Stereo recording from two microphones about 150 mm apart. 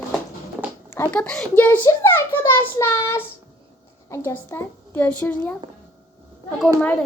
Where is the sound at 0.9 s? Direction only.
15° left (ahead or behind).